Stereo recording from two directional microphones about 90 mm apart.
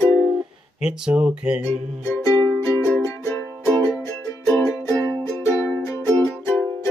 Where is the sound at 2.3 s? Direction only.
30° left (ahead or behind).